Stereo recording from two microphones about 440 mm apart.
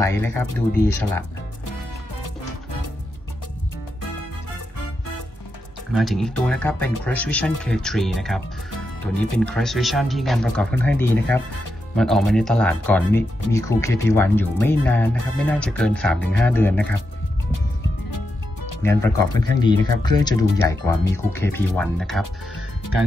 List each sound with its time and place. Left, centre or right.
0.0 s speech: centre
2.2 s music: left
5.9 s speech: centre
9.4 s speech: centre
18.1 s music: left
18.8 s speech: centre